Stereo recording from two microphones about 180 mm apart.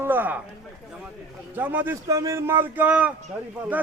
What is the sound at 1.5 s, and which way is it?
A man's voice, 10° right (ahead or behind).